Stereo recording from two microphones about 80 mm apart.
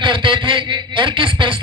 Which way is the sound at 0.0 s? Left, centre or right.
Right.